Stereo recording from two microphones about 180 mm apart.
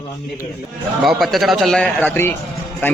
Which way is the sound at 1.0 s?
Centre (ahead or behind).